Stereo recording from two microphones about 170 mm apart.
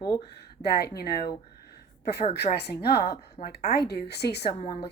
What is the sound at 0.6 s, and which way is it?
Speech, 70° left (ahead or behind).